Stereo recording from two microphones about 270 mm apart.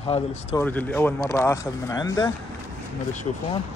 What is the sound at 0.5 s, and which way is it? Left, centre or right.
Speech, centre.